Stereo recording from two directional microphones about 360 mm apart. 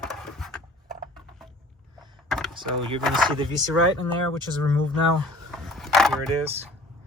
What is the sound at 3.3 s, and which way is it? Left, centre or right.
Speech, centre.